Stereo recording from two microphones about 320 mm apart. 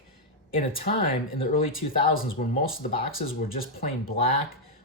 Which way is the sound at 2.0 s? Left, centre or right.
Left.